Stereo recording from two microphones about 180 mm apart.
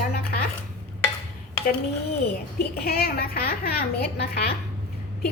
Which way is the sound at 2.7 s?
60° left (ahead or behind).